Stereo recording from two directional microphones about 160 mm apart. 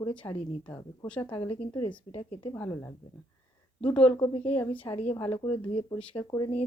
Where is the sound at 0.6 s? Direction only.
10° left (ahead or behind).